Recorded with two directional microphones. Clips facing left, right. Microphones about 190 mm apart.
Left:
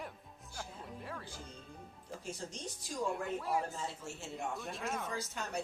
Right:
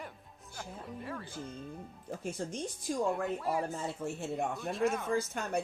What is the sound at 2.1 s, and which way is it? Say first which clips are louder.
Speech: right 6 dB; 55° right (ahead or behind).